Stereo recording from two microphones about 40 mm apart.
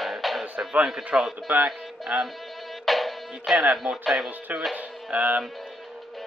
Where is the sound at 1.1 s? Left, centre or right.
Centre.